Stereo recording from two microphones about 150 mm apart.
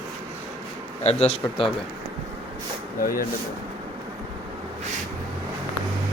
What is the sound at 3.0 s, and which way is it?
Speech, 70° left (ahead or behind).